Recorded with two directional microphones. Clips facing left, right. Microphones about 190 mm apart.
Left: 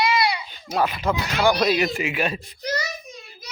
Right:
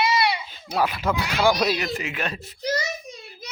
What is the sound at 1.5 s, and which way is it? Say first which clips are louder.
Speech: left 2 dB; 5° right (ahead or behind).